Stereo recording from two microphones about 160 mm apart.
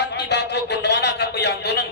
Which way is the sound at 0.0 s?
90° left.